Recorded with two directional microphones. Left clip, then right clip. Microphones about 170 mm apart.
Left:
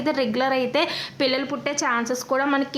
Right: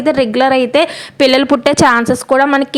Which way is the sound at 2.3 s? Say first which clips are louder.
Right 11 dB; 40° right (ahead or behind).